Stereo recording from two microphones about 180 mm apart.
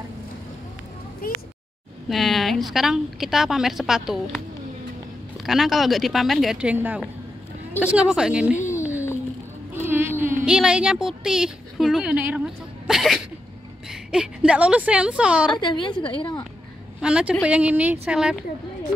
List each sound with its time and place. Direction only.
1.2 s speech: 55° left (ahead or behind)
2.0 s a woman's voice: centre (ahead or behind)
5.4 s a woman's voice: centre (ahead or behind)
9.8 s a woman's voice: 10° right (ahead or behind)
15.6 s a woman's voice: 25° left (ahead or behind)
17.0 s a woman's voice: 5° right (ahead or behind)